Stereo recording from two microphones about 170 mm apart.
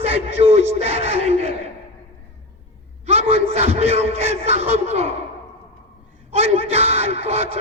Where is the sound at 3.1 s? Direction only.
35° right (ahead or behind).